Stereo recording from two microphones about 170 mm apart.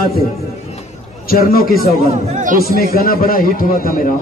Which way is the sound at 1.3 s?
60° left (ahead or behind).